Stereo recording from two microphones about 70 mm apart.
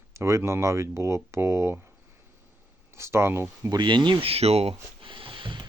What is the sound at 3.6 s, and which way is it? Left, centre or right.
Speech, right.